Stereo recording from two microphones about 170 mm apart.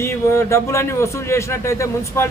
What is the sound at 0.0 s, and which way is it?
A man's voice, 15° left (ahead or behind).